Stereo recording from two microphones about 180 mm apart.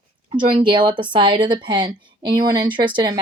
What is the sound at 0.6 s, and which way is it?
A woman's voice, 25° right (ahead or behind).